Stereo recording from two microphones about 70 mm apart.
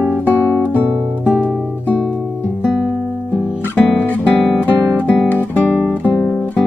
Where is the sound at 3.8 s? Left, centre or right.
Left.